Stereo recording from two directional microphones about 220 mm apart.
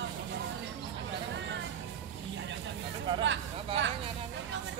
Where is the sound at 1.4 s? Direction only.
55° right (ahead or behind).